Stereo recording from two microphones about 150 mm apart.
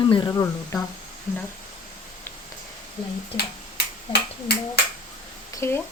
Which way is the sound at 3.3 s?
90° left.